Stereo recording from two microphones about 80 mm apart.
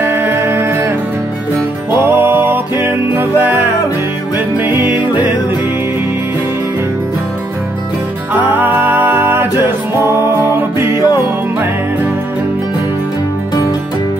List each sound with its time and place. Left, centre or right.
0.0 s music: right
2.0 s music: right
4.6 s music: right
8.5 s music: right